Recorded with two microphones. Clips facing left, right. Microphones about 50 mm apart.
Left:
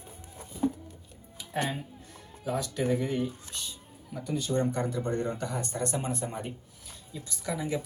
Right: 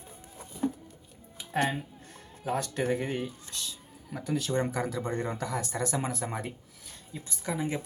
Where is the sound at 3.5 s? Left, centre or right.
Right.